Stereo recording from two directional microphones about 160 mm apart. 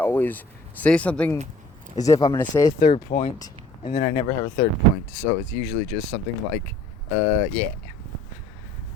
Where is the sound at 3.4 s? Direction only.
25° left (ahead or behind).